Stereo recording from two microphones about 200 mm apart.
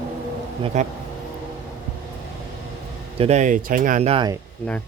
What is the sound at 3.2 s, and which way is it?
Speech, 35° right (ahead or behind).